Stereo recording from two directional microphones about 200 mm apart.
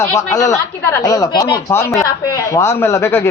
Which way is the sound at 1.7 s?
15° left (ahead or behind).